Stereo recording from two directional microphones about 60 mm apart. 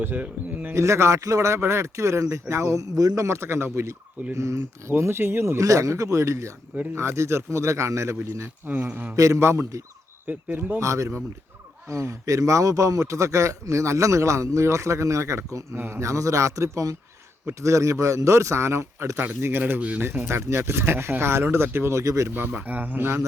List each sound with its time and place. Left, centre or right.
0.0 s speech: right
0.7 s a man's voice: right
5.6 s a man's voice: right
8.7 s speech: right
9.1 s a man's voice: right
9.4 s a man's voice: right
10.2 s speech: right
10.8 s a man's voice: right
15.7 s a man's voice: right
19.2 s speech: right
21.9 s a man's voice: right
22.4 s speech: right